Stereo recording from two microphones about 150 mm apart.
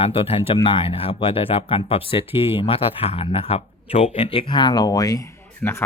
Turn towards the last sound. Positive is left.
turn(degrees=15)  # may be behind; listen again after turning